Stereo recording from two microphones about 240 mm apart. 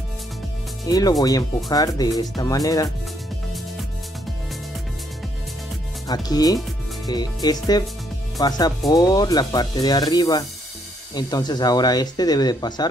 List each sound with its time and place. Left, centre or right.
0.8 s speech: centre
6.0 s speech: centre